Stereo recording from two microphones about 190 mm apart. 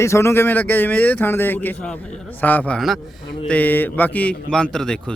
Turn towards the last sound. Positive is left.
turn(degrees=5)  # may be behind; listen again after turning